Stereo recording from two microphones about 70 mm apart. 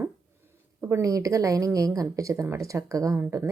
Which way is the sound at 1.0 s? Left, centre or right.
Right.